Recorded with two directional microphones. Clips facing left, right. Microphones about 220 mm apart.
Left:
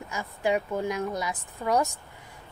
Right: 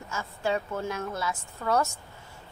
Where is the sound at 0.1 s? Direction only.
15° left (ahead or behind).